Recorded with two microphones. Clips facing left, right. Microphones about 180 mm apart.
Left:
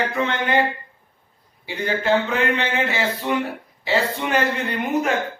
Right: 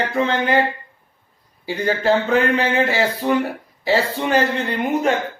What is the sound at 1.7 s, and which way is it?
A man's voice, 35° right (ahead or behind).